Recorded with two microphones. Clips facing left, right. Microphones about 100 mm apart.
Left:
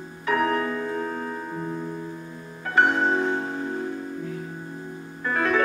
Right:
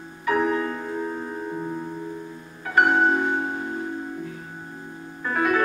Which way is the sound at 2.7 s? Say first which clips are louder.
Right 2 dB; 15° right (ahead or behind).